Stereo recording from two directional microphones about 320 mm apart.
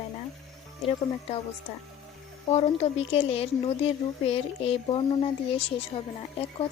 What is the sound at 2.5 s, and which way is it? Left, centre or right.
Speech, centre.